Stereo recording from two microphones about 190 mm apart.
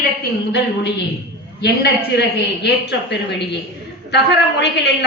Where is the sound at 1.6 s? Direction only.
60° left (ahead or behind).